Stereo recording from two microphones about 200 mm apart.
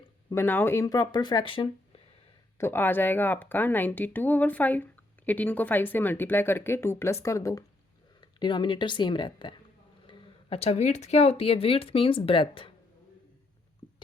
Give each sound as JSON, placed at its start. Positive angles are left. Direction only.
{"t": 0.3, "sound": "speech", "side_deg": 10}
{"t": 2.6, "sound": "speech", "side_deg": 10}